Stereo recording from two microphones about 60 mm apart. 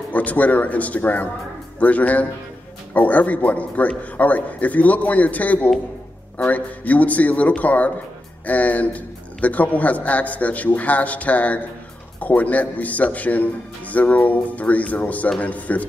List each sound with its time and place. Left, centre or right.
0.1 s a man's voice: left